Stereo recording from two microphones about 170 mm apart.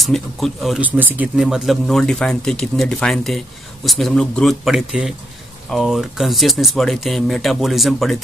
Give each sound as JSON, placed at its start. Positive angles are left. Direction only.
{"t": 0.0, "sound": "speech", "side_deg": 0}